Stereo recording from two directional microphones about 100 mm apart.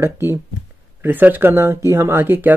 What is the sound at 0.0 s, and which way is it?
Speech, 25° right (ahead or behind).